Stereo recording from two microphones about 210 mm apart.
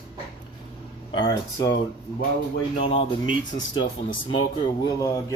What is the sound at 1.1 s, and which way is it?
Speech, 20° left (ahead or behind).